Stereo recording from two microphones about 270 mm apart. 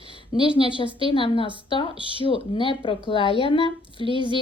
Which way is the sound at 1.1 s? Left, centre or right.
Centre.